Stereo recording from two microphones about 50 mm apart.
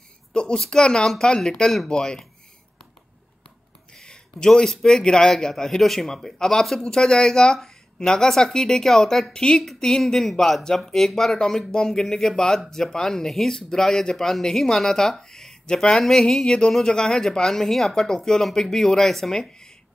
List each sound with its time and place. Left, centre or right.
0.3 s a sound: centre
0.6 s speech: centre
3.9 s speech: centre